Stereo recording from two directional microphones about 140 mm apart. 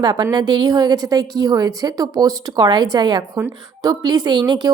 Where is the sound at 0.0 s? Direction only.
30° right (ahead or behind).